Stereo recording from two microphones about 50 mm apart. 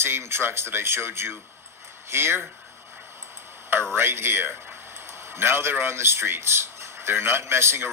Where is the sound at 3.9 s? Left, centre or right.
Right.